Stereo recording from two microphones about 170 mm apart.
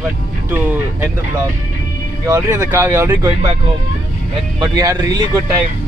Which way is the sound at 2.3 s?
15° right (ahead or behind).